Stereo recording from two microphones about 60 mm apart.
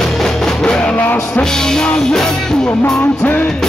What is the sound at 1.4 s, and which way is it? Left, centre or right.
Music, centre.